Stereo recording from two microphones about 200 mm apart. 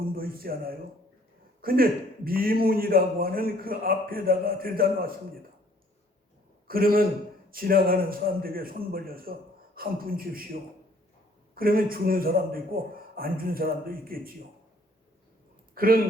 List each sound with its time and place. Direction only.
0.0 s a man's voice: 45° right (ahead or behind)
6.7 s a man's voice: 45° right (ahead or behind)
11.5 s a man's voice: 45° right (ahead or behind)
15.7 s a sound: 45° right (ahead or behind)